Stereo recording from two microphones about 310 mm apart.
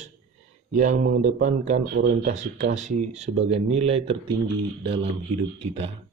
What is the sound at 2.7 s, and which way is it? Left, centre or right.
Speech, right.